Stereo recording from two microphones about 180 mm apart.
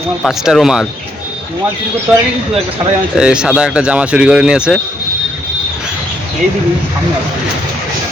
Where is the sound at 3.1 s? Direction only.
5° right (ahead or behind).